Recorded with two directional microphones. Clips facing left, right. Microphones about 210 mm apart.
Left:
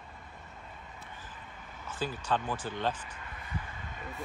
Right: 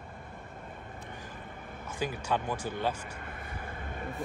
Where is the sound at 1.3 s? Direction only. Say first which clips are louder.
Right 5 dB; 50° right (ahead or behind).